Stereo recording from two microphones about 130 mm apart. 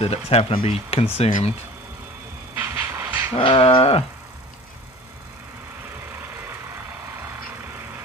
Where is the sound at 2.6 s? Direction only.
15° right (ahead or behind).